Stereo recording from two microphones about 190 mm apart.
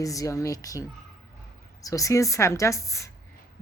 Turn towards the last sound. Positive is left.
turn(degrees=15)  # may be behind; listen again after turning